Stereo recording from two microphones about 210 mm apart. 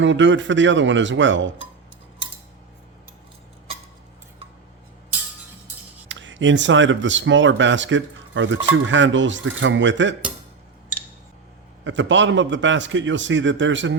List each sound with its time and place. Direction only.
0.0 s a man's voice: 60° right (ahead or behind)
6.1 s a man's voice: 60° right (ahead or behind)
11.9 s a man's voice: 60° right (ahead or behind)